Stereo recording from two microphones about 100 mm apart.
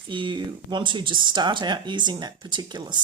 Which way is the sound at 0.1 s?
55° right (ahead or behind).